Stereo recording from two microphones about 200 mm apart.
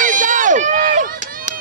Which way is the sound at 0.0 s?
40° right (ahead or behind).